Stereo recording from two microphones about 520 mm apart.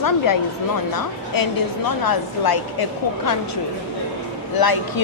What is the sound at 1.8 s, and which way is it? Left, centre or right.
Speech, left.